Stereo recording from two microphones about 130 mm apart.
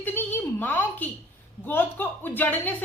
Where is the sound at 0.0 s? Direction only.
15° left (ahead or behind).